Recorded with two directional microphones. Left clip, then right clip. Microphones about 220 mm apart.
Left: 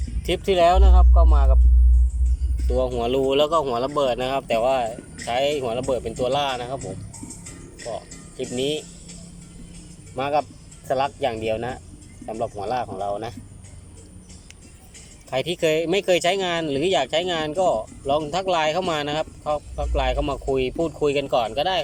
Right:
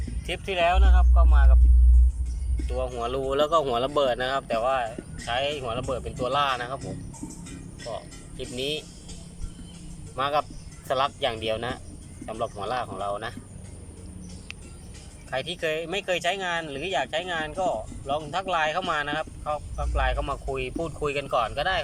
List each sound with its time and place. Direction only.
0.3 s speech: 20° left (ahead or behind)
2.6 s speech: 15° left (ahead or behind)
7.9 s speech: 10° left (ahead or behind)
10.2 s speech: 10° left (ahead or behind)
15.3 s speech: 15° left (ahead or behind)